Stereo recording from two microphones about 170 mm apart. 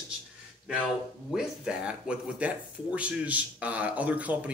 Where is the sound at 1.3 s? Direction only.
5° right (ahead or behind).